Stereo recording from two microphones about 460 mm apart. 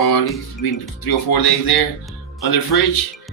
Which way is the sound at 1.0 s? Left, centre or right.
Left.